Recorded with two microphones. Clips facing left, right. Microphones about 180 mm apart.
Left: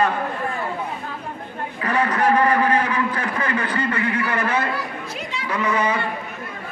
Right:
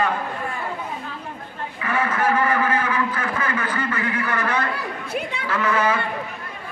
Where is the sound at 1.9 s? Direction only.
35° left (ahead or behind).